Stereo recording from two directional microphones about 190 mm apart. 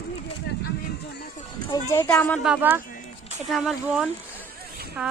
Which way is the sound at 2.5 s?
10° right (ahead or behind).